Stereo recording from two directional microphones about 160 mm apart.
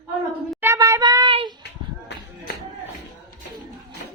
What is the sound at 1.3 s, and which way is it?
Speech, 35° right (ahead or behind).